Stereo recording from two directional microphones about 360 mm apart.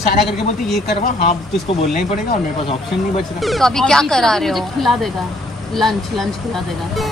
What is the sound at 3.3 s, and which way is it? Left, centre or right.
Speech, centre.